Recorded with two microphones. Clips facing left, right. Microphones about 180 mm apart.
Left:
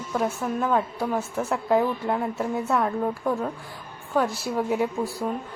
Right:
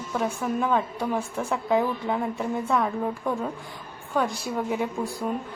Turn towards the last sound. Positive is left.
turn(degrees=0)  # may be behind; listen again after turning